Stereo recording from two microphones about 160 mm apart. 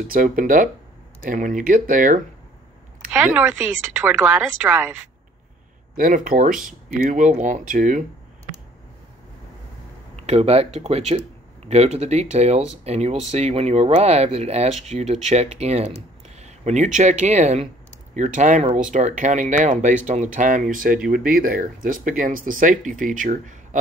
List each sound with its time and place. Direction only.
0.1 s speech: 60° right (ahead or behind)
3.1 s a woman's voice: 10° right (ahead or behind)
5.9 s speech: 60° right (ahead or behind)
10.1 s speech: 40° right (ahead or behind)